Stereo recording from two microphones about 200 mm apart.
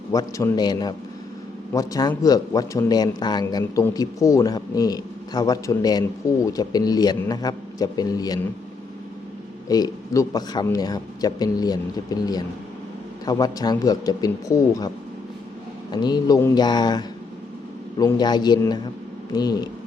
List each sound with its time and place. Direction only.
0.1 s speech: 15° left (ahead or behind)
9.6 s speech: 20° left (ahead or behind)
15.9 s speech: 20° left (ahead or behind)